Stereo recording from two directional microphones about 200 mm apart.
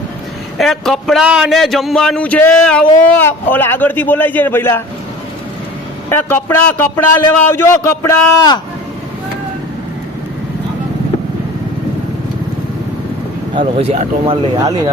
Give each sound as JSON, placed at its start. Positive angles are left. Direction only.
{"t": 0.6, "sound": "a man's voice", "side_deg": 0}
{"t": 6.1, "sound": "a man's voice", "side_deg": 10}
{"t": 13.6, "sound": "speech", "side_deg": -30}